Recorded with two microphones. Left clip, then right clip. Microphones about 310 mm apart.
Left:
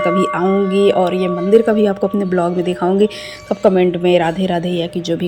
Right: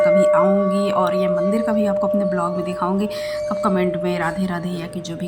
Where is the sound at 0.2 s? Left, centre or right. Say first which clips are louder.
Right 1 dB; centre.